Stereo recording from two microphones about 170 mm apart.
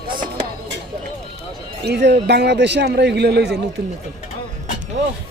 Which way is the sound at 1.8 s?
80° right.